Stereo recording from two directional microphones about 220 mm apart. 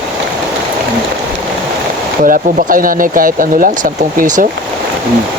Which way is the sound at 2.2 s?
40° right (ahead or behind).